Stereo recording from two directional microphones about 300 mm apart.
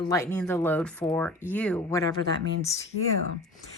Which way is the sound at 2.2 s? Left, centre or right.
Right.